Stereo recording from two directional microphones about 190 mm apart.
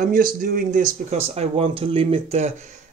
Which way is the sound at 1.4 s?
30° right (ahead or behind).